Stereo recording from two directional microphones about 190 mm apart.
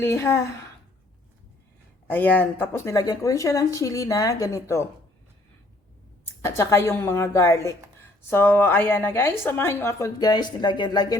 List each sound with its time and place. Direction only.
0.0 s a woman's voice: 15° left (ahead or behind)
2.0 s a woman's voice: 10° left (ahead or behind)
6.4 s a woman's voice: 15° left (ahead or behind)